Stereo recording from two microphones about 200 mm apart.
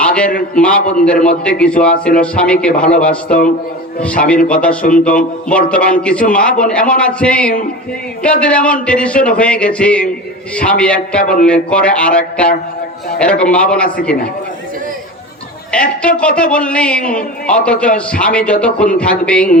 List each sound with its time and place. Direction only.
0.0 s a sound: 5° left (ahead or behind)
0.5 s speech: 5° left (ahead or behind)
4.8 s speech: 40° left (ahead or behind)
5.5 s speech: 5° left (ahead or behind)
15.7 s speech: 5° left (ahead or behind)